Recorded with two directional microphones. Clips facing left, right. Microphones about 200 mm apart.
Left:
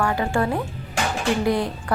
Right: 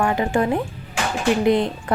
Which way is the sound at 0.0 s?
20° right (ahead or behind).